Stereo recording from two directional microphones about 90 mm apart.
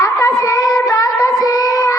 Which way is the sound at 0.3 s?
40° left (ahead or behind).